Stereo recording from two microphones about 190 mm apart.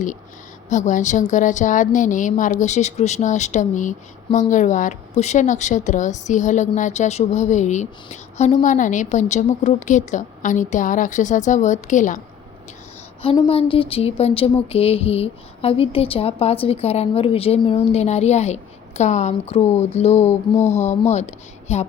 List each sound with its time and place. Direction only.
0.7 s a woman's voice: 40° left (ahead or behind)
13.2 s a woman's voice: 30° left (ahead or behind)